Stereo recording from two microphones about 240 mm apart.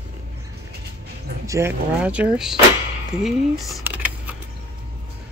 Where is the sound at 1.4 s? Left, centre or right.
Centre.